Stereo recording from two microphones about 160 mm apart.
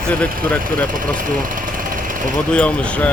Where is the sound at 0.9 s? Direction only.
55° right (ahead or behind).